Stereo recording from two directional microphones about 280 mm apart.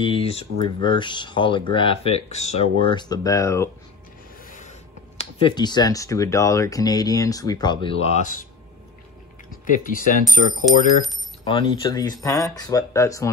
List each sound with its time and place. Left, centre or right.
0.0 s speech: centre
4.5 s speech: left
9.7 s speech: left
10.7 s speech: centre
11.6 s speech: centre